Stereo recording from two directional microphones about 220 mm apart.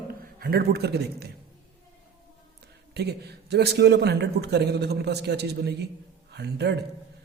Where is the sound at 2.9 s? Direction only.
50° right (ahead or behind).